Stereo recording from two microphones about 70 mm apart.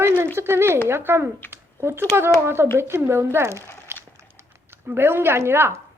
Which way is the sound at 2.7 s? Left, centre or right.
Right.